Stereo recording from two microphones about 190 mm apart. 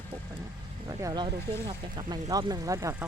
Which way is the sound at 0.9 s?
20° right (ahead or behind).